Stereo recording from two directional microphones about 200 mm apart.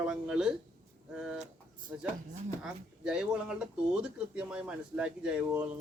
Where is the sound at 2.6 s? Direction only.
5° right (ahead or behind).